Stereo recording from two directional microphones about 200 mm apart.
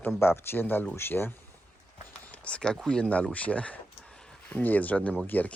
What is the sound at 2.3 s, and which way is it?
Speech, 5° left (ahead or behind).